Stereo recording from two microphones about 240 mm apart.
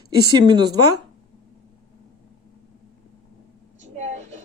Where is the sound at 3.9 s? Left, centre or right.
Right.